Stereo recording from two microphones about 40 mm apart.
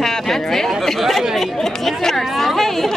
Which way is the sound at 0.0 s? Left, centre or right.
Centre.